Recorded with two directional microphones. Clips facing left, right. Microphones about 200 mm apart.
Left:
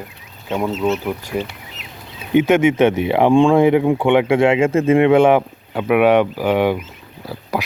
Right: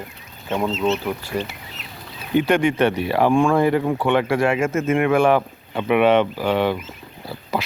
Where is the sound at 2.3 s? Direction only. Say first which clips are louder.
Left 4 dB; 20° left (ahead or behind).